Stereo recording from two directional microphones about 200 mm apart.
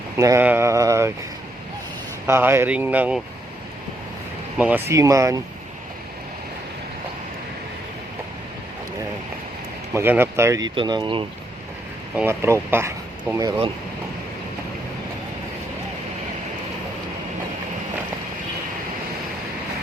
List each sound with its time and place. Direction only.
0.2 s speech: 15° right (ahead or behind)
2.2 s speech: 10° right (ahead or behind)
4.5 s speech: 10° right (ahead or behind)
9.9 s speech: 10° right (ahead or behind)
12.1 s speech: 10° right (ahead or behind)